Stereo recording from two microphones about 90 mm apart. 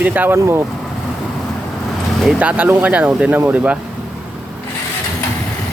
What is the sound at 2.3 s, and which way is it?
Speech, 15° right (ahead or behind).